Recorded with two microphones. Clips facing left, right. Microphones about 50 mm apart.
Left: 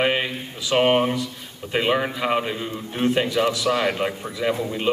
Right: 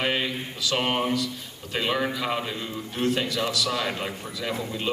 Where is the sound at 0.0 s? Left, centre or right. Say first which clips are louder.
Left 4 dB; left.